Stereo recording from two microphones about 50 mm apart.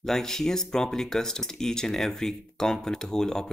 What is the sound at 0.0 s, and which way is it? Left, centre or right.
Speech, centre.